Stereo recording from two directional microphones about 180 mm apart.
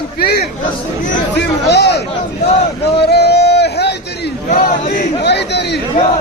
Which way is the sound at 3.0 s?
65° left (ahead or behind).